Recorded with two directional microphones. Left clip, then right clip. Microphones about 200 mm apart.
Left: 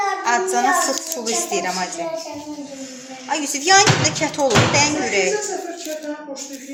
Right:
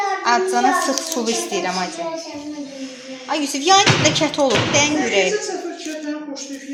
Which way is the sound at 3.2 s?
15° right (ahead or behind).